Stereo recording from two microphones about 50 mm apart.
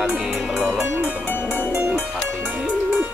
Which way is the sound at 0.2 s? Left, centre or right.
Centre.